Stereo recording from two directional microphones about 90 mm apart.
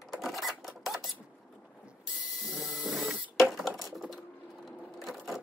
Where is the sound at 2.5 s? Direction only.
Centre (ahead or behind).